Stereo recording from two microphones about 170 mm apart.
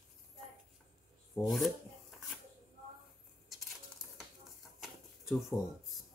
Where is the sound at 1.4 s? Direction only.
Centre (ahead or behind).